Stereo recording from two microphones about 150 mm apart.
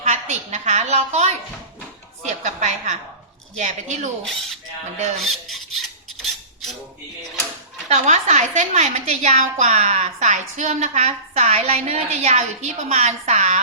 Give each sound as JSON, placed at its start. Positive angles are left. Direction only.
{"t": 0.0, "sound": "a sound", "side_deg": -45}
{"t": 2.2, "sound": "a woman's voice", "side_deg": -50}
{"t": 5.2, "sound": "filing", "side_deg": 0}
{"t": 7.9, "sound": "a woman's voice", "side_deg": -45}